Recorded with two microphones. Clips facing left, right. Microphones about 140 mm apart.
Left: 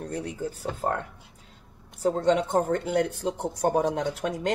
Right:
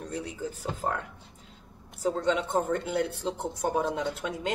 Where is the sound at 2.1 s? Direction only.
45° left (ahead or behind).